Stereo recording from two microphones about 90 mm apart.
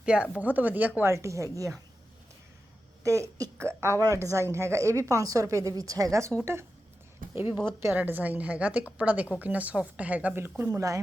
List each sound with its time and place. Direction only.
0.0 s a woman's voice: 10° right (ahead or behind)
1.1 s a woman's voice: 35° right (ahead or behind)
3.0 s a woman's voice: 35° right (ahead or behind); by 10.5 s 20° right (ahead or behind)
10.7 s a woman's voice: 40° right (ahead or behind)